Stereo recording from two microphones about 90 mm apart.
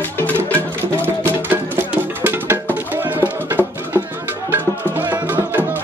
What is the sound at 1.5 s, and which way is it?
Music, 20° right (ahead or behind).